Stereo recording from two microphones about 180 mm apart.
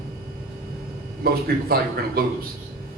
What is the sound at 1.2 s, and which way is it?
A man's voice, 55° right (ahead or behind).